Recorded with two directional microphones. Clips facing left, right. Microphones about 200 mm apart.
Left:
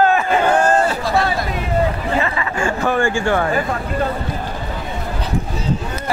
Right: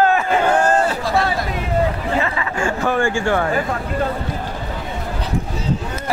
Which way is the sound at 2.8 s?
50° left (ahead or behind).